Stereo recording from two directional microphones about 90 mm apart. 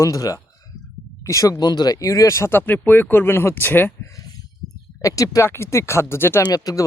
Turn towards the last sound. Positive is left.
turn(degrees=45)  # may be behind; listen again after turning